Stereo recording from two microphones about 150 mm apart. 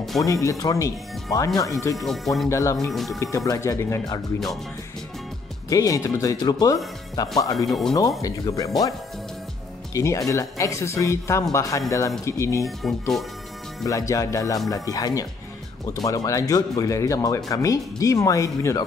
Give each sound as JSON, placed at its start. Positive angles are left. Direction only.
{"t": 0.2, "sound": "speech", "side_deg": 20}
{"t": 2.0, "sound": "speech", "side_deg": 0}
{"t": 2.5, "sound": "speech", "side_deg": 20}
{"t": 2.9, "sound": "speech", "side_deg": 0}
{"t": 3.2, "sound": "speech", "side_deg": 20}
{"t": 5.7, "sound": "speech", "side_deg": 20}
{"t": 7.5, "sound": "speech", "side_deg": 0}
{"t": 8.2, "sound": "speech", "side_deg": 20}
{"t": 9.9, "sound": "speech", "side_deg": 20}
{"t": 12.8, "sound": "speech", "side_deg": 0}
{"t": 13.8, "sound": "speech", "side_deg": 20}